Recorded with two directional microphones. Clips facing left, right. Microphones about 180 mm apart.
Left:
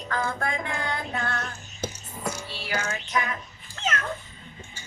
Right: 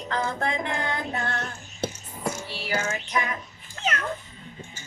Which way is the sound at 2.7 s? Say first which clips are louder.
Right 1 dB; 25° right (ahead or behind).